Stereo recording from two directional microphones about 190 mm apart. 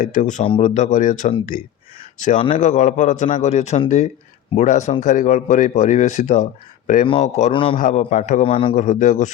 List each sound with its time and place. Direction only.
0.0 s speech: 45° left (ahead or behind)
0.4 s a man's voice: 30° left (ahead or behind)
0.7 s speech: 40° left (ahead or behind)
7.5 s a man's voice: 25° left (ahead or behind)
7.8 s speech: 45° left (ahead or behind)
8.7 s speech: 40° left (ahead or behind)